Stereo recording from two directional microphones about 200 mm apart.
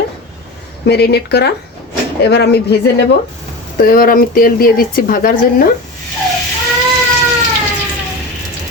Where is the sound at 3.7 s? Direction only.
45° left (ahead or behind).